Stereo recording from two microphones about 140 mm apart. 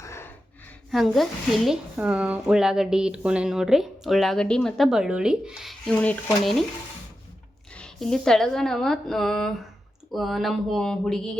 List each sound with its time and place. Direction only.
0.0 s a sound: 20° left (ahead or behind)
0.9 s speech: centre (ahead or behind)
5.9 s speech: 10° left (ahead or behind)
7.8 s speech: 5° left (ahead or behind)